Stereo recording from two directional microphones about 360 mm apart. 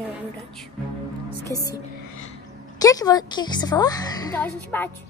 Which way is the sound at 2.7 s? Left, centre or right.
Centre.